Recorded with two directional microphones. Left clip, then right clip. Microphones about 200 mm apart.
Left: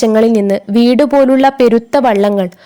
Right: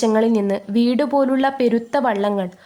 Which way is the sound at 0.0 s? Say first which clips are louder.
Left 7 dB; 35° left (ahead or behind).